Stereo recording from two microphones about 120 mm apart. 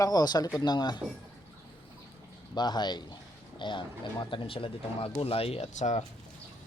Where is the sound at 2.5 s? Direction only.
35° left (ahead or behind); by 6.0 s 75° left (ahead or behind).